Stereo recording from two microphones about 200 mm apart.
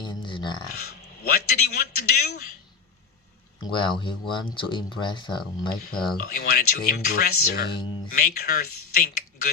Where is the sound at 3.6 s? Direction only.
25° left (ahead or behind).